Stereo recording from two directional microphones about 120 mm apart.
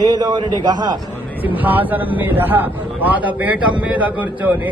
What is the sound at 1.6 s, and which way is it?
A man's voice, 15° right (ahead or behind).